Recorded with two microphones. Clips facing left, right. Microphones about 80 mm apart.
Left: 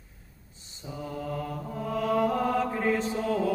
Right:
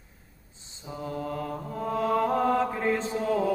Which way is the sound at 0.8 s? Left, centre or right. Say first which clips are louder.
Right 1 dB; right.